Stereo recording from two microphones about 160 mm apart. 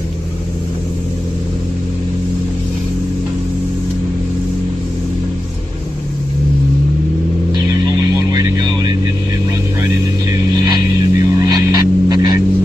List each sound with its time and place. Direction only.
8.3 s vehicle: 25° right (ahead or behind)
11.1 s vehicle: 25° right (ahead or behind)